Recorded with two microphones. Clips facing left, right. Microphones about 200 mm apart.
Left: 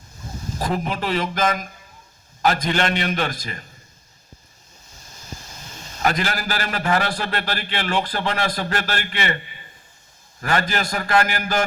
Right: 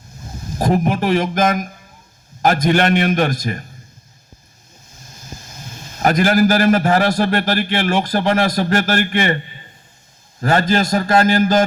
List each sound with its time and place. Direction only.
0.6 s a man's voice: 45° right (ahead or behind)
6.0 s a man's voice: 45° right (ahead or behind)
10.4 s a man's voice: 40° right (ahead or behind)